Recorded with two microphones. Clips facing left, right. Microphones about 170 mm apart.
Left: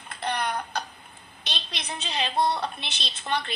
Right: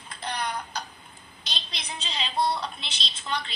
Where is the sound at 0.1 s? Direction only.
60° left (ahead or behind).